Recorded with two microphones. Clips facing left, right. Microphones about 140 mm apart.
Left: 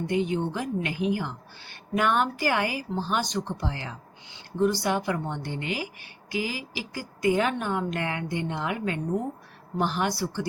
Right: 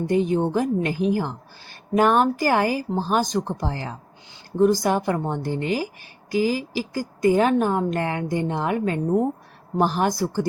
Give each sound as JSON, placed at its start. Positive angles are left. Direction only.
{"t": 0.1, "sound": "a woman's voice", "side_deg": -40}